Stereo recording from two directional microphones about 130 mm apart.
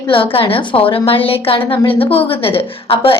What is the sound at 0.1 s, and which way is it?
A woman's voice, 45° left (ahead or behind).